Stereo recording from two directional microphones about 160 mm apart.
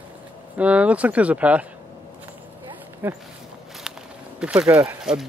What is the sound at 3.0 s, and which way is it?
Speech, 10° right (ahead or behind).